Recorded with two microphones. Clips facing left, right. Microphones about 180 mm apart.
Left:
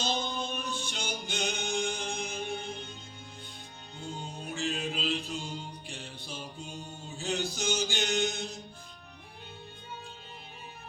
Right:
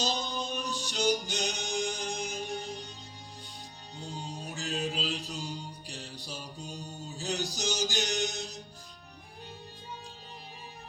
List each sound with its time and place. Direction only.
0.0 s music: 35° right (ahead or behind)
4.5 s music: 40° right (ahead or behind)